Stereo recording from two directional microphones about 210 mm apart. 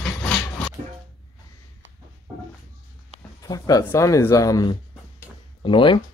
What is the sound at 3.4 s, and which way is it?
Speech, 15° left (ahead or behind).